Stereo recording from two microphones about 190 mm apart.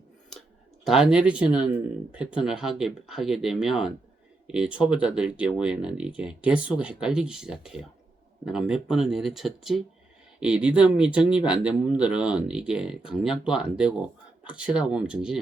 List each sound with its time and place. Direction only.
0.9 s speech: 5° right (ahead or behind)